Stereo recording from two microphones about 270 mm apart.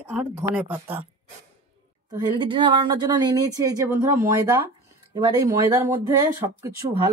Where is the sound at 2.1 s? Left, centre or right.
Centre.